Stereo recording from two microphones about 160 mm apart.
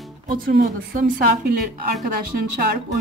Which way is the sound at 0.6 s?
65° right (ahead or behind).